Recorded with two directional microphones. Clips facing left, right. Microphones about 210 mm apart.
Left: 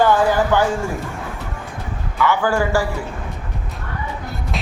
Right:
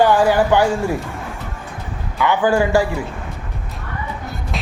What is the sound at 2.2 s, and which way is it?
Speech, 20° right (ahead or behind).